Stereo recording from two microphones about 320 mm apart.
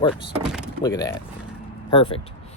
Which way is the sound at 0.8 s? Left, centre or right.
Centre.